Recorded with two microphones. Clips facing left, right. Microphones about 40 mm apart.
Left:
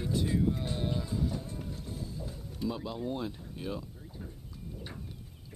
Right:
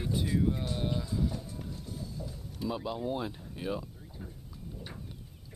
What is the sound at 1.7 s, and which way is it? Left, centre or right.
Music, left.